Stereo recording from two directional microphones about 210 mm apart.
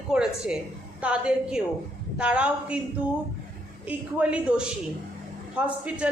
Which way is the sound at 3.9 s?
5° right (ahead or behind).